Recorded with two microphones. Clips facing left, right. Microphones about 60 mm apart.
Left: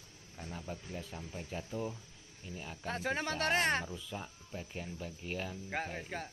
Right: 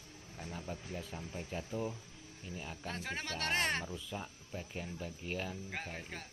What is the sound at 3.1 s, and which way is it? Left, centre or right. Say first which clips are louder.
Speech: left 3 dB; centre.